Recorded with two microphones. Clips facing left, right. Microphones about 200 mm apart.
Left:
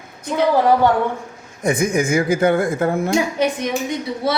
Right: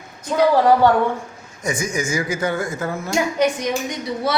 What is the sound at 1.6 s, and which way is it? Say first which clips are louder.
Speech: left 6 dB; 55° left (ahead or behind).